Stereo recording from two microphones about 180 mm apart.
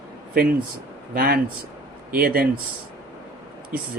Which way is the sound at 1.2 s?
55° right (ahead or behind).